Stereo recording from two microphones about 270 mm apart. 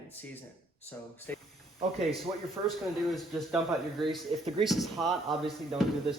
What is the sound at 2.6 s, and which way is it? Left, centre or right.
Speech, centre.